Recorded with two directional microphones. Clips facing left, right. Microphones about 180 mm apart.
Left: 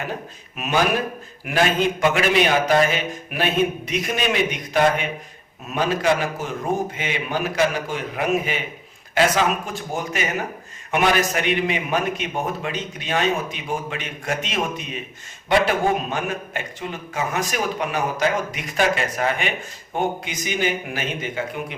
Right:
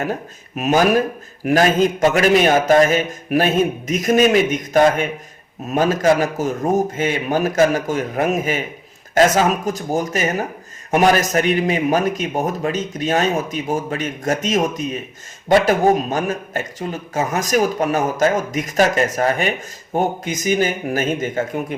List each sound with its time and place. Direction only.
0.0 s a man's voice: 40° right (ahead or behind)